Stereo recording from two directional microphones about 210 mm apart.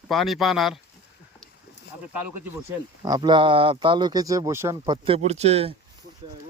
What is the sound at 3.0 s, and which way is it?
Speech, 20° right (ahead or behind).